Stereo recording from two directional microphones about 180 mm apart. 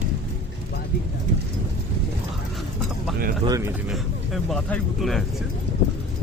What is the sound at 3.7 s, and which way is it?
Speech, centre (ahead or behind).